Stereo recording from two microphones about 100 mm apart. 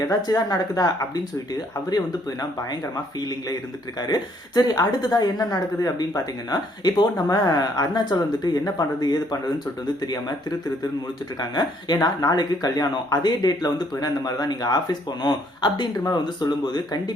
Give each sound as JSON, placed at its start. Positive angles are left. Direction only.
{"t": 0.0, "sound": "a woman's voice", "side_deg": 35}
{"t": 11.3, "sound": "a woman's voice", "side_deg": 45}